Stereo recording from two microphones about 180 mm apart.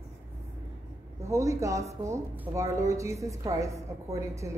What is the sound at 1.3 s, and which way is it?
A woman's voice, 15° right (ahead or behind).